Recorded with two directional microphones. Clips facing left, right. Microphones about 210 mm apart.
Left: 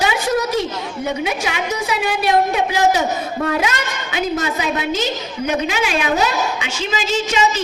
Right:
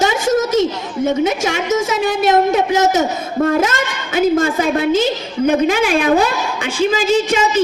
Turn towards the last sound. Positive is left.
turn(degrees=-50)  # may be behind; listen again after turning